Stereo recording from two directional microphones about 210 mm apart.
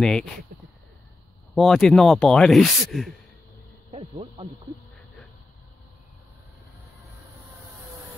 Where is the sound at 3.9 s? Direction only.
25° right (ahead or behind).